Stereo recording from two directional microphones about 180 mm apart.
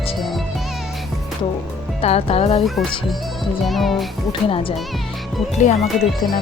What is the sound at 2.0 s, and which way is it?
Speech, 35° left (ahead or behind).